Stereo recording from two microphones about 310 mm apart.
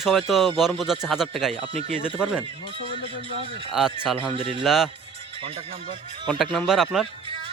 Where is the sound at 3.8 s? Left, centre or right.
Centre.